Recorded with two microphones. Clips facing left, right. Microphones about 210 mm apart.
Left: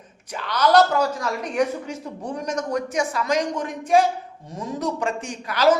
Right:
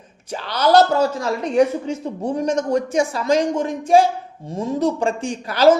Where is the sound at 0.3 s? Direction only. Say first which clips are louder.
Right 3 dB; 30° right (ahead or behind).